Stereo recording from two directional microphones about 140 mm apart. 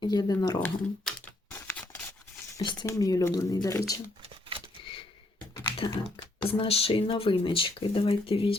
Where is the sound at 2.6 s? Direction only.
30° left (ahead or behind).